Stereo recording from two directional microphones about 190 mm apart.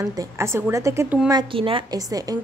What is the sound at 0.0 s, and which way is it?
A woman's voice, 20° right (ahead or behind).